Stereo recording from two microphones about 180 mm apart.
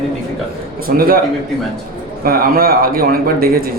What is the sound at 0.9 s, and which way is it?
Speech, 55° right (ahead or behind).